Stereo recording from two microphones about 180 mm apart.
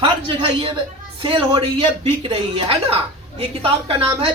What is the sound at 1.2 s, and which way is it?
Speech, 30° right (ahead or behind).